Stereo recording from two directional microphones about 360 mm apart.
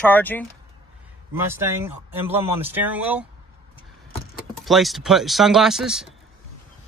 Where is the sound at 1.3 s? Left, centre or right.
Centre.